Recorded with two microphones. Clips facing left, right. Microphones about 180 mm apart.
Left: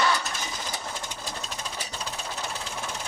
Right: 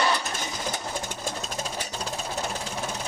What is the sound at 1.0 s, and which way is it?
Sewing machine, 50° right (ahead or behind).